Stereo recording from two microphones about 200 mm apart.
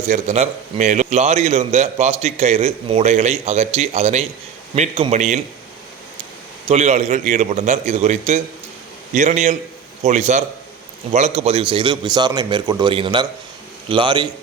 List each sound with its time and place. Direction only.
0.1 s a man's voice: 35° right (ahead or behind)
6.7 s a man's voice: 35° right (ahead or behind)